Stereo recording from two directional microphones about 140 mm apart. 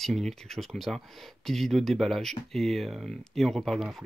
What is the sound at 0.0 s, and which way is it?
Speech, centre (ahead or behind).